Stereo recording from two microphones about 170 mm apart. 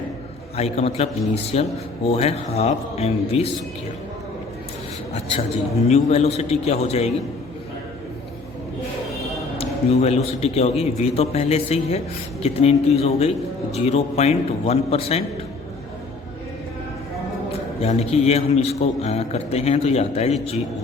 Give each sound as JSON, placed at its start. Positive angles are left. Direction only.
{"t": 0.5, "sound": "a man's voice", "side_deg": 40}
{"t": 5.1, "sound": "a man's voice", "side_deg": 40}
{"t": 9.6, "sound": "a sound", "side_deg": 40}
{"t": 10.4, "sound": "a man's voice", "side_deg": 40}
{"t": 17.7, "sound": "a man's voice", "side_deg": 35}